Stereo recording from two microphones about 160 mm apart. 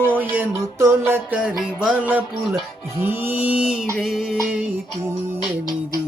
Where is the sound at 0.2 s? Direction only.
10° right (ahead or behind).